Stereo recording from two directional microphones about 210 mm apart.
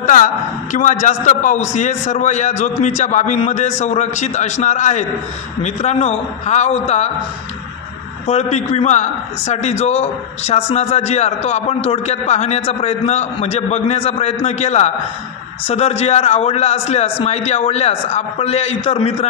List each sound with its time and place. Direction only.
0.0 s a man's voice: 40° left (ahead or behind)
8.3 s a man's voice: 30° left (ahead or behind)